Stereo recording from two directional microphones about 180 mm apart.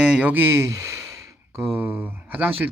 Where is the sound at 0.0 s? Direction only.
10° right (ahead or behind).